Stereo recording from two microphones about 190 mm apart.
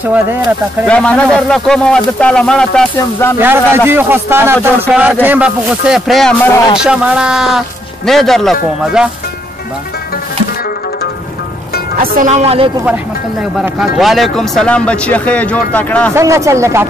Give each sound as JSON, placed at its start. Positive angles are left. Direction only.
{"t": 0.0, "sound": "a man's voice", "side_deg": -10}
{"t": 0.8, "sound": "speech", "side_deg": 5}
{"t": 3.3, "sound": "a man's voice", "side_deg": -10}
{"t": 12.2, "sound": "speech", "side_deg": -35}
{"t": 12.8, "sound": "speech", "side_deg": -5}
{"t": 16.2, "sound": "a man's voice", "side_deg": -15}